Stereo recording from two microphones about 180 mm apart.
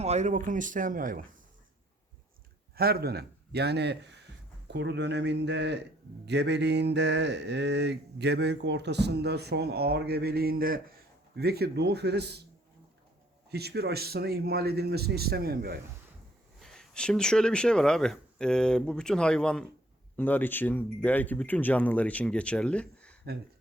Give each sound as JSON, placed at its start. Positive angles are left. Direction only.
{"t": 0.0, "sound": "speech", "side_deg": -40}
{"t": 2.7, "sound": "speech", "side_deg": -60}
{"t": 4.7, "sound": "a sound", "side_deg": -75}
{"t": 11.3, "sound": "a man's voice", "side_deg": -60}
{"t": 13.5, "sound": "a man's voice", "side_deg": -65}
{"t": 16.6, "sound": "speech", "side_deg": 0}